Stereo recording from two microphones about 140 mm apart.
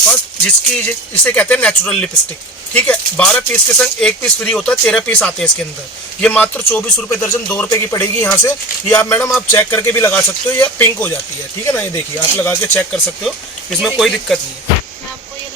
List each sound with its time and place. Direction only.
0.8 s speech: 10° left (ahead or behind)
13.2 s speech: centre (ahead or behind)